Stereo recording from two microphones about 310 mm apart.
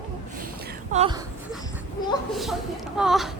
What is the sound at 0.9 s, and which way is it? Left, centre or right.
Speech, centre.